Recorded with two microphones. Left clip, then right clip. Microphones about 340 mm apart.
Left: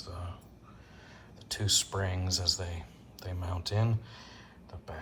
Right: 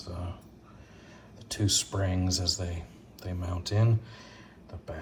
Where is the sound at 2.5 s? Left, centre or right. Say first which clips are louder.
Right 2 dB; left.